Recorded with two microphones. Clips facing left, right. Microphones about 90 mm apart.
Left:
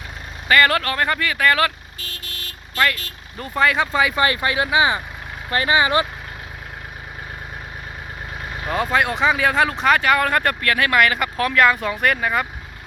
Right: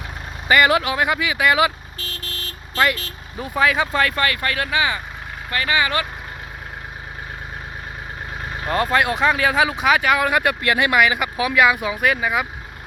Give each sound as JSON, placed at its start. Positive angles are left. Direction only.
{"t": 0.4, "sound": "speech", "side_deg": -15}
{"t": 2.7, "sound": "speech", "side_deg": -25}
{"t": 3.3, "sound": "speech", "side_deg": -5}
{"t": 4.2, "sound": "speech", "side_deg": 20}
{"t": 8.6, "sound": "speech", "side_deg": 0}
{"t": 10.6, "sound": "speech", "side_deg": -20}
{"t": 10.9, "sound": "speech", "side_deg": -5}